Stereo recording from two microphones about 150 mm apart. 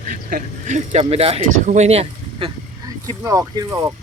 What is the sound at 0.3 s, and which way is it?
Speech, 60° right (ahead or behind).